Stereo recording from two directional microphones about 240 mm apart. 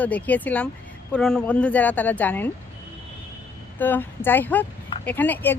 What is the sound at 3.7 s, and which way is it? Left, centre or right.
Speech, centre.